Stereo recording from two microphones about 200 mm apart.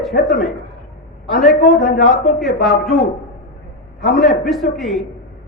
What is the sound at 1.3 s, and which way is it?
A man's voice, centre (ahead or behind).